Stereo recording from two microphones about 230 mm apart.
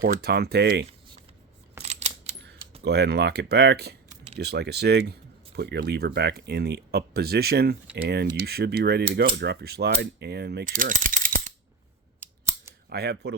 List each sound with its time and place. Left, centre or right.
0.0 s speech: right
1.8 s a sound: right
2.8 s speech: right
9.1 s mechanisms: right
12.2 s scissors: centre
12.9 s speech: right